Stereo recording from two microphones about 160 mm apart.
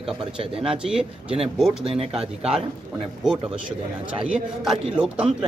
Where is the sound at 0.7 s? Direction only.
5° right (ahead or behind).